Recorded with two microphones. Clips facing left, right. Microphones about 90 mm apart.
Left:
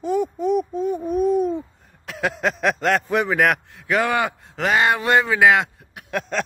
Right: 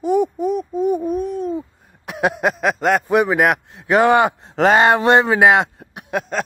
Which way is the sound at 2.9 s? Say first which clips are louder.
Right 7 dB; 15° right (ahead or behind).